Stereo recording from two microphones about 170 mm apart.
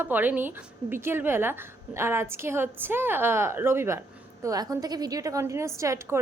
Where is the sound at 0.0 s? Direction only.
10° right (ahead or behind).